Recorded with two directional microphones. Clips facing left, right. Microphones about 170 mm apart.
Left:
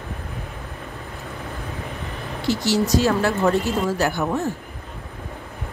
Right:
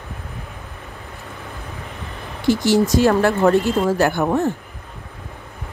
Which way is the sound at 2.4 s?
50° right (ahead or behind).